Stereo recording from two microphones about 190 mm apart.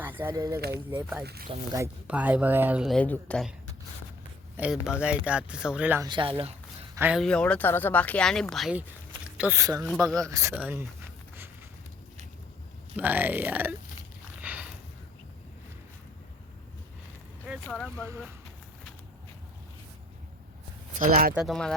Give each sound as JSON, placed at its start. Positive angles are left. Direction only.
{"t": 0.0, "sound": "speech", "side_deg": -10}
{"t": 1.2, "sound": "speech", "side_deg": -55}
{"t": 1.5, "sound": "speech", "side_deg": -20}
{"t": 2.0, "sound": "speech", "side_deg": -5}
{"t": 4.5, "sound": "speech", "side_deg": -5}
{"t": 6.1, "sound": "speech", "side_deg": -25}
{"t": 6.9, "sound": "speech", "side_deg": -10}
{"t": 7.2, "sound": "speech", "side_deg": 5}
{"t": 13.0, "sound": "speech", "side_deg": -10}
{"t": 14.4, "sound": "a sound", "side_deg": -10}
{"t": 17.5, "sound": "speech", "side_deg": 5}
{"t": 21.0, "sound": "speech", "side_deg": -50}
{"t": 21.3, "sound": "speech", "side_deg": 0}